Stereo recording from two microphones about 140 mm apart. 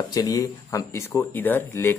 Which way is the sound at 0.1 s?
25° left (ahead or behind).